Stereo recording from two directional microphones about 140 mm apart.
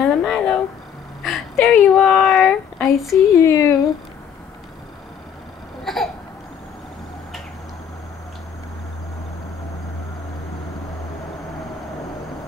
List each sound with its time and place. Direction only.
0.0 s a sound: centre (ahead or behind)
3.3 s speech: 20° left (ahead or behind)
5.9 s cough: centre (ahead or behind)